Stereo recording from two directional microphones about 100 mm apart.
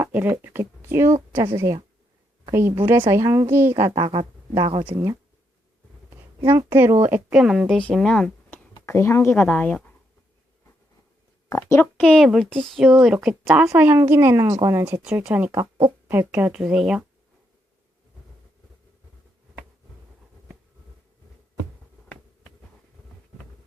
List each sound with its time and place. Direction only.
0.0 s a woman's voice: 20° right (ahead or behind)
3.9 s speech: 60° right (ahead or behind)
6.4 s a woman's voice: 45° right (ahead or behind)
6.7 s a woman's voice: 25° right (ahead or behind)
7.4 s speech: 5° right (ahead or behind)
7.7 s speech: 10° left (ahead or behind)
8.9 s speech: 25° left (ahead or behind)
9.3 s speech: 15° left (ahead or behind)
11.4 s speech: 30° left (ahead or behind)
11.8 s speech: 15° left (ahead or behind)
12.2 s a child's voice: centre (ahead or behind); by 15.0 s 30° right (ahead or behind)
15.0 s speech: 15° right (ahead or behind)